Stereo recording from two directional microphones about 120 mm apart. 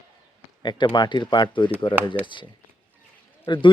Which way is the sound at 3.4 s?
40° left (ahead or behind).